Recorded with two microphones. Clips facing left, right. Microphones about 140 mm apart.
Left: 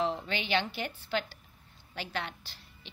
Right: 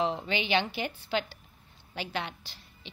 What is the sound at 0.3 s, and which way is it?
Speech, 90° right.